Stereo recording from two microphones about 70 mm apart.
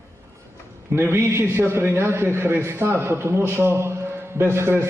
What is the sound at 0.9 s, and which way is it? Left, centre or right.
A man's voice, right.